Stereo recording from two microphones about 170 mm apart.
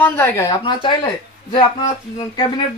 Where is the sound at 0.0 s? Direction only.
15° left (ahead or behind).